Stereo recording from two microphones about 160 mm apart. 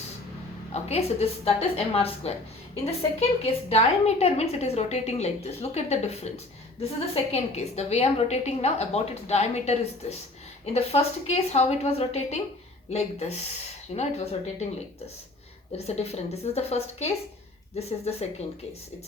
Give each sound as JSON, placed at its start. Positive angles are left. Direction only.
{"t": 0.7, "sound": "a woman's voice", "side_deg": 40}